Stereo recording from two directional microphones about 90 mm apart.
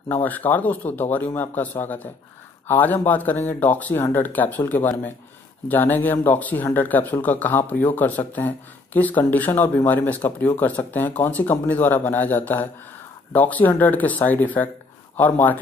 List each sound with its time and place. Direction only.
0.1 s speech: 20° left (ahead or behind)